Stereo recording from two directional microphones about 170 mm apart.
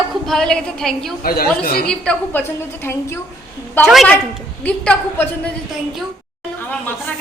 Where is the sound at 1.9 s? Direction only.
10° left (ahead or behind).